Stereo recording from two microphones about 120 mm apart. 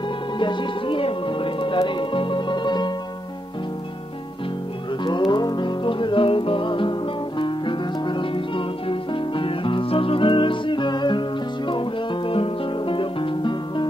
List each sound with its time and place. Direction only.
0.4 s music: 40° left (ahead or behind)
5.0 s music: 40° left (ahead or behind)